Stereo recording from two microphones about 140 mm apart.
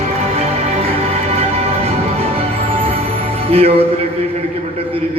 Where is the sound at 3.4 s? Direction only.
45° right (ahead or behind).